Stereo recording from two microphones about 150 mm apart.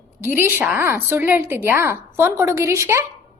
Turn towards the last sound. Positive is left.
turn(degrees=-20)  # may be behind; listen again after turning